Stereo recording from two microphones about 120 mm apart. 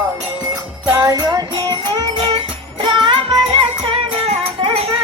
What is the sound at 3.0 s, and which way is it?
Music, 45° right (ahead or behind).